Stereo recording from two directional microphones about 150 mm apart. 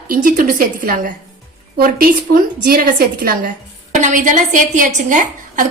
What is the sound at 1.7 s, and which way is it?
A woman's voice, 75° right (ahead or behind).